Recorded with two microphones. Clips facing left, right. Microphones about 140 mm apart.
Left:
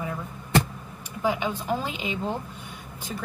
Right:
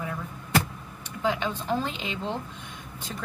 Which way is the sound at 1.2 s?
10° left (ahead or behind).